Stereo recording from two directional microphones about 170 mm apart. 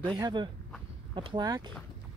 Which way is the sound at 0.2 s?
25° right (ahead or behind).